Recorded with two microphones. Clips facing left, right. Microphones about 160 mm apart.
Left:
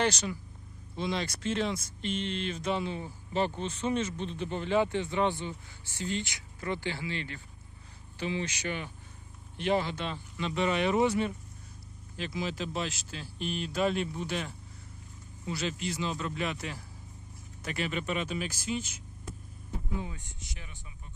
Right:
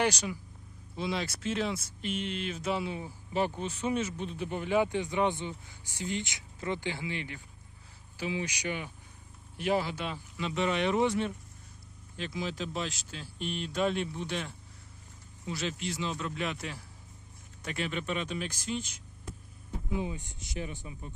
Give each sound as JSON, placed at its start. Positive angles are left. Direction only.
{"t": 0.0, "sound": "speech", "side_deg": -10}
{"t": 19.9, "sound": "speech", "side_deg": -20}